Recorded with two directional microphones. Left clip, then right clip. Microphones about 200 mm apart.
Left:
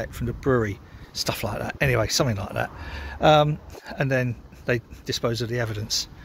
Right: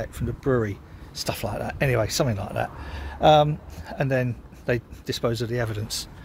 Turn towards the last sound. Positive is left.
turn(degrees=5)  # may be behind; listen again after turning